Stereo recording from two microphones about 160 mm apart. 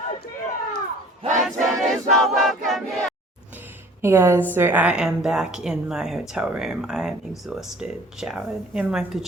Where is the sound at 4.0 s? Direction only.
15° right (ahead or behind).